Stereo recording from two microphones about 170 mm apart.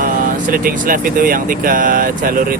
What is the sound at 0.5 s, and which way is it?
Speech, 55° right (ahead or behind).